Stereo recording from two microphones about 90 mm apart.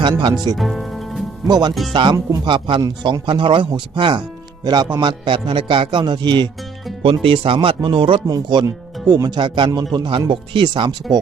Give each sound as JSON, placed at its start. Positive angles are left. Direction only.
{"t": 0.5, "sound": "music", "side_deg": 0}
{"t": 1.5, "sound": "a man's voice", "side_deg": -50}
{"t": 4.6, "sound": "a man's voice", "side_deg": -50}
{"t": 4.9, "sound": "speech", "side_deg": -65}
{"t": 7.0, "sound": "speech", "side_deg": -80}
{"t": 8.3, "sound": "speech", "side_deg": -55}
{"t": 8.6, "sound": "speech", "side_deg": -45}
{"t": 9.4, "sound": "speech", "side_deg": -60}